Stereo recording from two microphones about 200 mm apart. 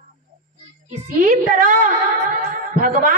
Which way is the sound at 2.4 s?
40° right (ahead or behind).